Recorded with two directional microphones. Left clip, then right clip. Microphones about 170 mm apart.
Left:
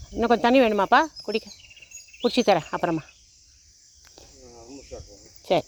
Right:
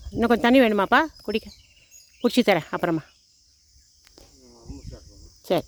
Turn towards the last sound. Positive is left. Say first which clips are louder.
# left 1 dB
turn(degrees=-50)  # may be behind; listen again after turning